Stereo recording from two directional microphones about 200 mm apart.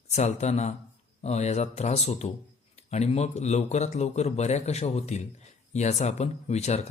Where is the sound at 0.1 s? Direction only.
35° left (ahead or behind).